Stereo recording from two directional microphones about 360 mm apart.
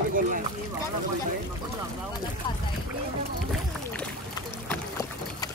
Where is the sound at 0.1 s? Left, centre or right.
Right.